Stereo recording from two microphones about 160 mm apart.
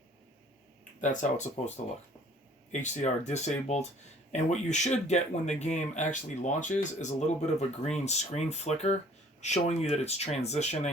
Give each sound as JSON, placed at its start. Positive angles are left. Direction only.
{"t": 1.0, "sound": "speech", "side_deg": 50}
{"t": 2.8, "sound": "speech", "side_deg": 45}